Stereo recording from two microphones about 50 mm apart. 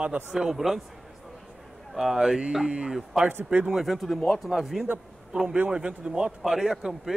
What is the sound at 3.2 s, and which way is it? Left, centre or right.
Speech, right.